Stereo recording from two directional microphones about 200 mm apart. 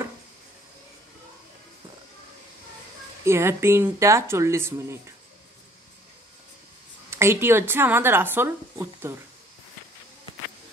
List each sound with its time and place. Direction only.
3.3 s speech: 15° right (ahead or behind)
7.1 s speech: 10° right (ahead or behind)